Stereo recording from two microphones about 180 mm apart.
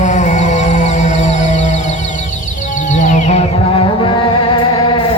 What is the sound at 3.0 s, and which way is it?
Music, 40° left (ahead or behind).